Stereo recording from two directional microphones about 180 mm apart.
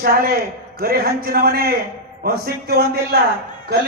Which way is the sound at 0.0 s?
55° right (ahead or behind).